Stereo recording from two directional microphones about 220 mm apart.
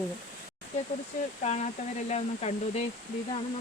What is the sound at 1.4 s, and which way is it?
Speech, 30° left (ahead or behind).